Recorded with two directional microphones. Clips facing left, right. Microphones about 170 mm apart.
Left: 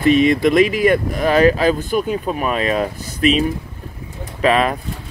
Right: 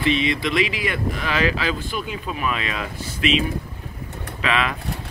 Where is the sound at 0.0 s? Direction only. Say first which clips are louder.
Left 8 dB; 45° left (ahead or behind).